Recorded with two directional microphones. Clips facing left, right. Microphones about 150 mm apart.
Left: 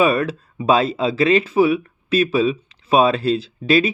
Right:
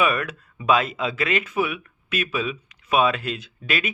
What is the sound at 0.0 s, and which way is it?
Speech, 30° left (ahead or behind).